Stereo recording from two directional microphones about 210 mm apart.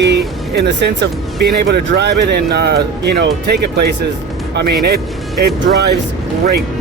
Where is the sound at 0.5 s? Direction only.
55° right (ahead or behind).